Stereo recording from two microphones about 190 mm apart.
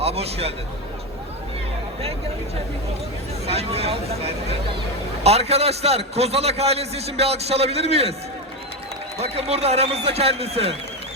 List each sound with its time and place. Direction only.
0.0 s a man's voice: 30° right (ahead or behind)
3.4 s a man's voice: 35° right (ahead or behind)
9.1 s a man's voice: 35° right (ahead or behind)